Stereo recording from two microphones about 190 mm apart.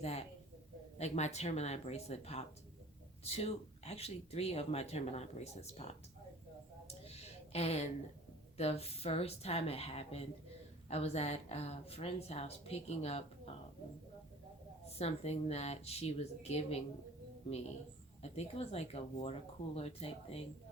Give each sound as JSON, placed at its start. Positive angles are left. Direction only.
{"t": 0.0, "sound": "speech", "side_deg": 35}
{"t": 6.8, "sound": "a sound", "side_deg": 35}
{"t": 8.5, "sound": "speech", "side_deg": 35}
{"t": 14.8, "sound": "speech", "side_deg": 35}
{"t": 18.2, "sound": "speech", "side_deg": 35}